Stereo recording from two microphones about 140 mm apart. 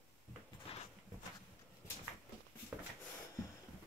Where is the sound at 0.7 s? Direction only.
45° left (ahead or behind).